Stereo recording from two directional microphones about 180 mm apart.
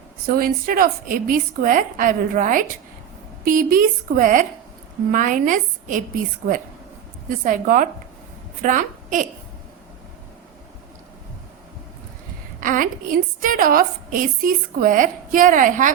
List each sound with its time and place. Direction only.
0.3 s a woman's voice: 55° right (ahead or behind)
12.5 s a woman's voice: 45° right (ahead or behind)